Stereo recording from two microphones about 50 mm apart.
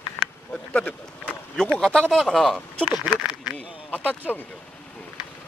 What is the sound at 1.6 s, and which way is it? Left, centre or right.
Speech, centre.